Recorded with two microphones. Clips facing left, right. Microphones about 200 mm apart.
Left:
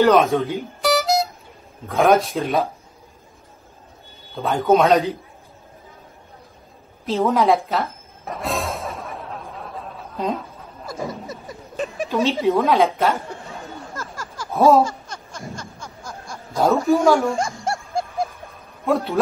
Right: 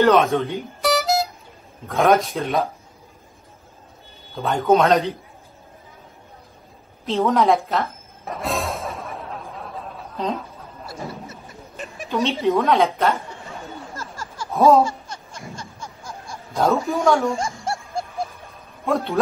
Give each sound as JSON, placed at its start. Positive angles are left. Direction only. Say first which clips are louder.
{"t": 0.0, "sound": "music", "louder": "left 1 dB", "side_deg": 0}
{"t": 1.9, "sound": "a woman's voice", "louder": "left 1 dB", "side_deg": 0}
{"t": 4.4, "sound": "a woman's voice", "louder": "left 1 dB", "side_deg": 0}
{"t": 7.1, "sound": "music", "louder": "even", "side_deg": 0}
{"t": 10.9, "sound": "a sound", "louder": "left 5 dB", "side_deg": 40}
{"t": 12.1, "sound": "a woman's voice", "louder": "left 1 dB", "side_deg": 0}
{"t": 13.9, "sound": "a sound", "louder": "left 1 dB", "side_deg": 45}
{"t": 14.5, "sound": "laughter", "louder": "even", "side_deg": 0}
{"t": 14.9, "sound": "laughter", "louder": "right 1 dB", "side_deg": 45}
{"t": 16.5, "sound": "a woman's voice", "louder": "left 3 dB", "side_deg": 0}
{"t": 18.5, "sound": "a sound", "louder": "left 1 dB", "side_deg": 0}